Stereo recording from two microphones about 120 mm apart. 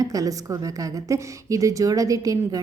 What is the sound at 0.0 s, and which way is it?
A woman's voice, 30° right (ahead or behind).